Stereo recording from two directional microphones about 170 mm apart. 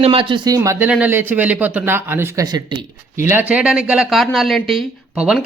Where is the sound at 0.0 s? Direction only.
30° right (ahead or behind).